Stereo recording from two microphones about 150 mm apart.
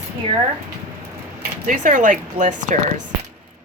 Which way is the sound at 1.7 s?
60° right (ahead or behind).